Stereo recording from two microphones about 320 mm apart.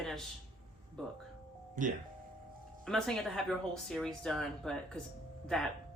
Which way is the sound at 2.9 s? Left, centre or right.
Centre.